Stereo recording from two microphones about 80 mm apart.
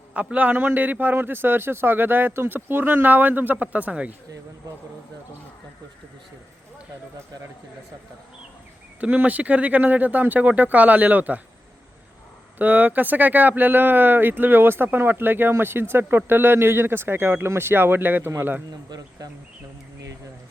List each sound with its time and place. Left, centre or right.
0.1 s a man's voice: centre
9.0 s a man's voice: centre
12.5 s a man's voice: right
18.9 s speech: right